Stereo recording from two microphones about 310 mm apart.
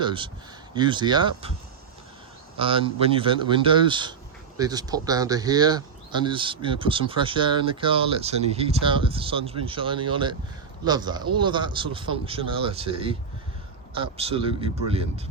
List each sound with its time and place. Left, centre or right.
0.0 s speech: centre
2.6 s speech: centre